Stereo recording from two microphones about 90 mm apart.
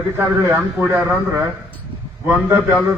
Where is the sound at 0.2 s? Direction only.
30° right (ahead or behind).